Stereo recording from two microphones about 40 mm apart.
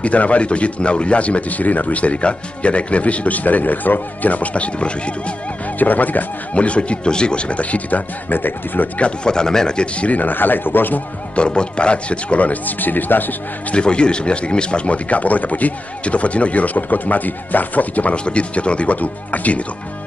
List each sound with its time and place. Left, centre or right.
0.0 s speech: left
5.8 s speech: left
6.5 s speech: left
8.3 s speech: left
9.0 s speech: left
10.0 s speech: left
11.3 s speech: left
13.7 s speech: left
18.1 s speech: left
18.9 s speech: left